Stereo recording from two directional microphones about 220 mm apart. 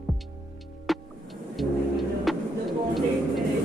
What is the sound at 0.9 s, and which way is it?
Music, centre (ahead or behind).